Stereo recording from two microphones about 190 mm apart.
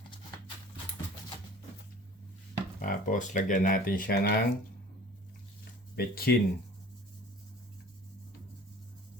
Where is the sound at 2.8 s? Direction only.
45° left (ahead or behind).